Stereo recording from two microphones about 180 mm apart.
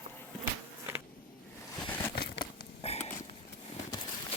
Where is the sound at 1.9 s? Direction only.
15° left (ahead or behind).